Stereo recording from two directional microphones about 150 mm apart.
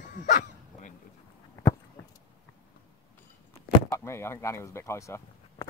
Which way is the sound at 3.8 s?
15° left (ahead or behind).